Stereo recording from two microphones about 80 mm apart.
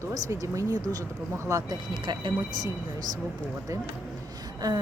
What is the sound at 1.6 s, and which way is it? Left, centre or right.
Speech, right.